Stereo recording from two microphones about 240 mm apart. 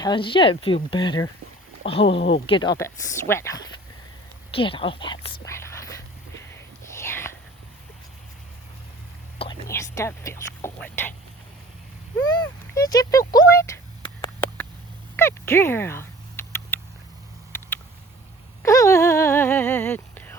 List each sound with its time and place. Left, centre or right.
0.0 s speech: centre
4.5 s speech: left
6.5 s whispering: centre
9.4 s speech: centre
12.2 s a sound: centre
15.1 s a sound: centre
18.6 s speech: centre